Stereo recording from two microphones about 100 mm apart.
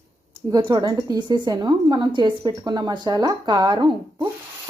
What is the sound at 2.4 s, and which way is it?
A woman's voice, 40° right (ahead or behind).